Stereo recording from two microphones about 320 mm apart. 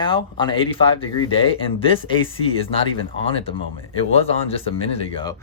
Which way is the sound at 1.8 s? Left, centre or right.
Centre.